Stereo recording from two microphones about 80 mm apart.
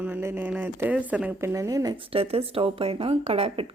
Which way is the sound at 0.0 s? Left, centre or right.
Right.